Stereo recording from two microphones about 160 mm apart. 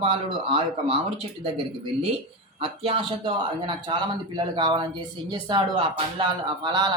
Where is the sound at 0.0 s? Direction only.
35° right (ahead or behind).